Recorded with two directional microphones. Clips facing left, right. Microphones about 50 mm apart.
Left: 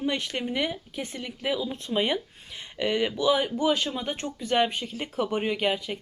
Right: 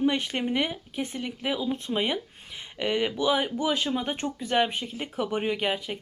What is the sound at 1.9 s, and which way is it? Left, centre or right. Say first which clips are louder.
Speech: left 6 dB; centre.